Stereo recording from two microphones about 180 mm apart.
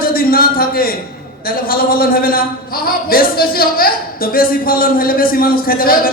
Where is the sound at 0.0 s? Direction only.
55° left (ahead or behind).